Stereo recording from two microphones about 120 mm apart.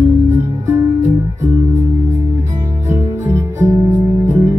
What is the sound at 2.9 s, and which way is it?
Music, 20° right (ahead or behind).